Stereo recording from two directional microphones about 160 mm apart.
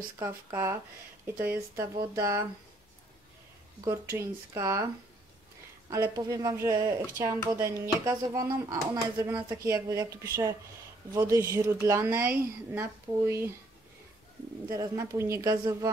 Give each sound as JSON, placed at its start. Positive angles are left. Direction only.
{"t": 0.2, "sound": "a woman's voice", "side_deg": -15}
{"t": 3.8, "sound": "speech", "side_deg": -15}
{"t": 5.9, "sound": "a woman's voice", "side_deg": -20}
{"t": 14.7, "sound": "speech", "side_deg": -20}